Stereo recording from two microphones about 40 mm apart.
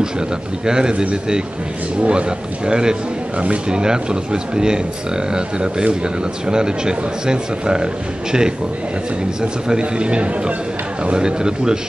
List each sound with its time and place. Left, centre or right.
0.7 s speech: centre
2.0 s speech: right